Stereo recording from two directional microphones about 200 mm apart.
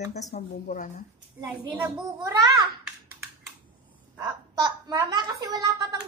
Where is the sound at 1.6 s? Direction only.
15° right (ahead or behind).